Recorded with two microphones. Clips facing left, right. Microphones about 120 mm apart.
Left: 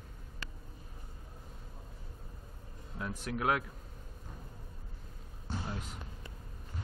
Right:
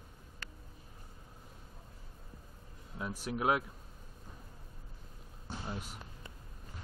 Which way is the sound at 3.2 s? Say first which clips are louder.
Right 1 dB; 20° right (ahead or behind).